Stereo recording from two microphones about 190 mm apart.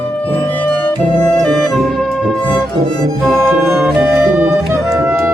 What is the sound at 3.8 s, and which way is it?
Music, 5° right (ahead or behind).